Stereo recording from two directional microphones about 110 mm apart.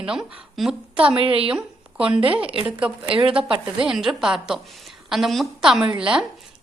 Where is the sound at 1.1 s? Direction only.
55° right (ahead or behind).